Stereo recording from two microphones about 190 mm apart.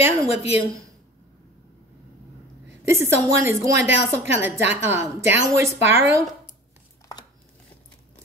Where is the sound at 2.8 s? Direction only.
15° right (ahead or behind).